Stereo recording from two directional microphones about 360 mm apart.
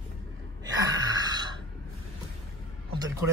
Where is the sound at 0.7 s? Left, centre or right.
Centre.